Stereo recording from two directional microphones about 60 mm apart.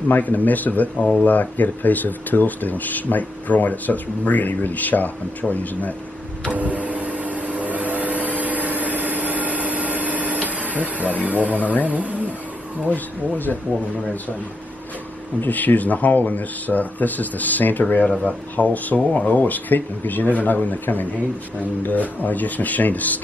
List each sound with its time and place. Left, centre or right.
0.1 s speech: left
6.5 s vehicle: right
11.2 s speech: right
12.9 s speech: left
15.4 s speech: left
18.0 s speech: centre
22.2 s speech: left